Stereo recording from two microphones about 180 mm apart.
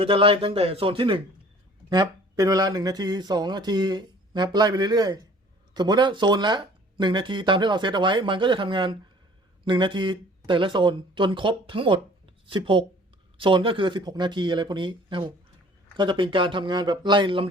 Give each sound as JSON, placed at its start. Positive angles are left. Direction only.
{"t": 0.0, "sound": "speech", "side_deg": -30}